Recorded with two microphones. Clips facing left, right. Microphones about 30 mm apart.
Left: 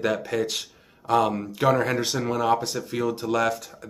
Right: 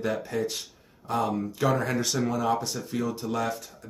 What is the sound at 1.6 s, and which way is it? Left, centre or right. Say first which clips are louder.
Speech: left 5 dB; left.